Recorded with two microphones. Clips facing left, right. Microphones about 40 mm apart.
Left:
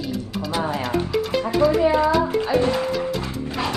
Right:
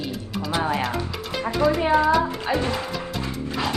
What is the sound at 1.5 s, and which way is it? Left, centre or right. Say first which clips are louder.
Speech: left 2 dB; centre.